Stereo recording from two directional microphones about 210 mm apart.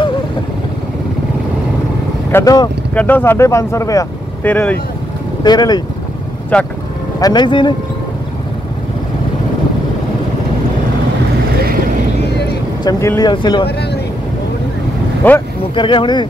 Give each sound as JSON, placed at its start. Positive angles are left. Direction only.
{"t": 2.3, "sound": "speech", "side_deg": 15}
{"t": 2.9, "sound": "speech", "side_deg": 5}
{"t": 5.4, "sound": "speech", "side_deg": 20}
{"t": 6.5, "sound": "speech", "side_deg": 5}
{"t": 7.2, "sound": "speech", "side_deg": 20}
{"t": 12.8, "sound": "speech", "side_deg": 15}
{"t": 15.2, "sound": "speech", "side_deg": 10}
{"t": 15.7, "sound": "speech", "side_deg": 25}